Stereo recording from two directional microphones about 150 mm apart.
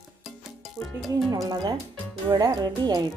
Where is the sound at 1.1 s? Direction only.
25° right (ahead or behind).